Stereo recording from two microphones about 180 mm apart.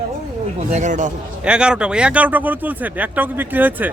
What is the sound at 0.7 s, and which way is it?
Speech, 40° right (ahead or behind).